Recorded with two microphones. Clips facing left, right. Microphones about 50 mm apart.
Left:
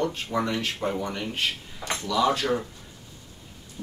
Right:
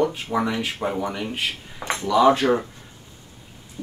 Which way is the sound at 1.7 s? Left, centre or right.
Right.